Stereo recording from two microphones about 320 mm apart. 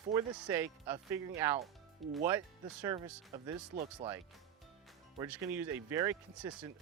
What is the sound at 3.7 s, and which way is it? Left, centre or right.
Speech, right.